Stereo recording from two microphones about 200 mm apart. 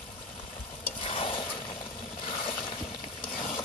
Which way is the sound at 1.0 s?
25° left (ahead or behind).